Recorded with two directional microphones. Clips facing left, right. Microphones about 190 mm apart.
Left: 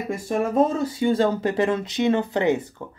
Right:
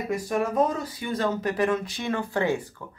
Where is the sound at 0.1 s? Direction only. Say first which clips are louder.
Left 3 dB; 25° left (ahead or behind).